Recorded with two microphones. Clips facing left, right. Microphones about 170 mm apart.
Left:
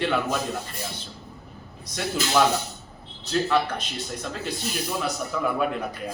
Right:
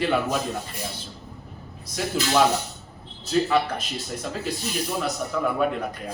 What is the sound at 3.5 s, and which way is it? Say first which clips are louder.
Speech: right 1 dB; 5° right (ahead or behind).